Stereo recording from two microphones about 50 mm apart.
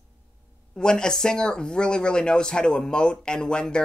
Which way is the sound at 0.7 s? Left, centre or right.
Centre.